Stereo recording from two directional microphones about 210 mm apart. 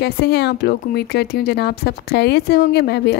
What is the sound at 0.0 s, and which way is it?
Speech, 50° left (ahead or behind).